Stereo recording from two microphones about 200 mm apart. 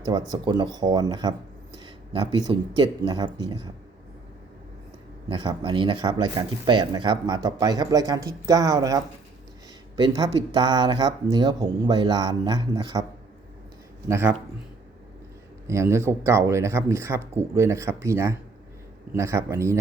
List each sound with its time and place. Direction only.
0.0 s speech: 20° right (ahead or behind)
2.5 s speech: 20° right (ahead or behind)
5.3 s speech: 20° right (ahead or behind)
14.1 s speech: 10° right (ahead or behind)
15.6 s speech: 15° right (ahead or behind)